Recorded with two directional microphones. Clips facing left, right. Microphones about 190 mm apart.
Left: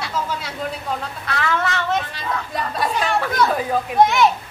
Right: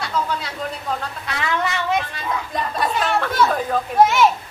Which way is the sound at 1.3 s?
15° right (ahead or behind).